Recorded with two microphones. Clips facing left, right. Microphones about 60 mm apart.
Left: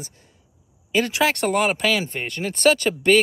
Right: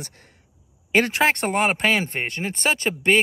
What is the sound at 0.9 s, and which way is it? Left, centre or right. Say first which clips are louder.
Speech: right 1 dB; right.